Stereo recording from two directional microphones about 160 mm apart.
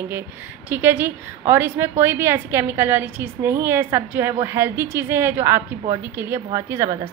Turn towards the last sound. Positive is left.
turn(degrees=-15)  # may be behind; listen again after turning